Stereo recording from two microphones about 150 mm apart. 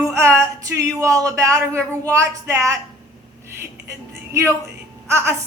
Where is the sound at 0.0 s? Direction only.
20° right (ahead or behind).